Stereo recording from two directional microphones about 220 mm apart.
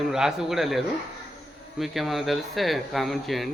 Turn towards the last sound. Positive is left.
turn(degrees=0)  # may be behind; listen again after turning